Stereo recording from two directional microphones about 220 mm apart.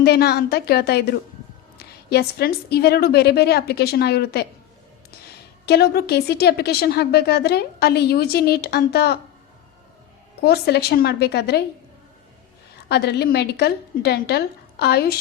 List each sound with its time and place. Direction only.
0.0 s a woman's voice: 45° left (ahead or behind)
5.6 s a woman's voice: 45° left (ahead or behind)
10.4 s a woman's voice: 45° left (ahead or behind)
12.9 s a woman's voice: 50° left (ahead or behind)